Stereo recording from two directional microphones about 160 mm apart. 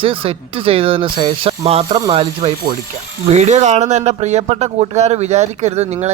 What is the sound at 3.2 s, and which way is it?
Speech, 45° right (ahead or behind).